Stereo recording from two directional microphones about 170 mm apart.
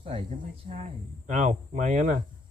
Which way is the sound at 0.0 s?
35° right (ahead or behind).